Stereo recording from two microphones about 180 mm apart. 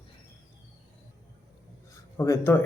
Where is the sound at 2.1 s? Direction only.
15° left (ahead or behind).